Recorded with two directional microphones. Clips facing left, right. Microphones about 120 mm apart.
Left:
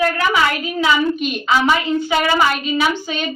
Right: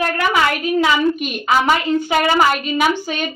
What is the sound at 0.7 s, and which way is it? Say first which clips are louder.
Speech: right 1 dB; 50° right (ahead or behind).